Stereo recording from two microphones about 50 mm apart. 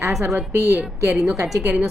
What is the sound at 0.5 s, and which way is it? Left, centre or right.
Speech, right.